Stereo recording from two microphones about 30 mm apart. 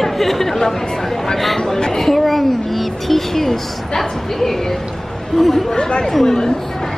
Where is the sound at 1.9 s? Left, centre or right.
Centre.